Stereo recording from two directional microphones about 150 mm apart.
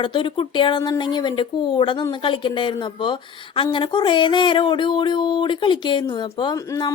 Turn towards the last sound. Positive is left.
turn(degrees=25)  # may be behind; listen again after turning